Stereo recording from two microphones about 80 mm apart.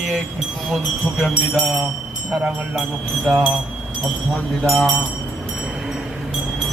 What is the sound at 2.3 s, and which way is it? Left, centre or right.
Speech, centre.